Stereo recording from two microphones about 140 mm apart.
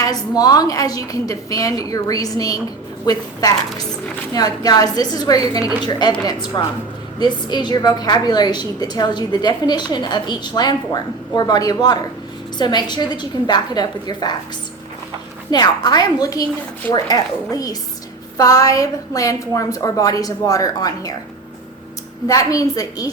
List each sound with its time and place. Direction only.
0.0 s a woman's voice: 25° left (ahead or behind)
4.4 s a woman's voice: 30° left (ahead or behind)
15.4 s a woman's voice: 30° left (ahead or behind)
22.3 s a woman's voice: 25° left (ahead or behind)